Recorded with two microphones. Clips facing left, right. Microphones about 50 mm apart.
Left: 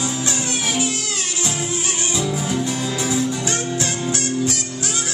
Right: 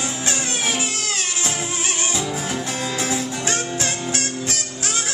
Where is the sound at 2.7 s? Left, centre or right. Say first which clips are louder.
Left 1 dB; right.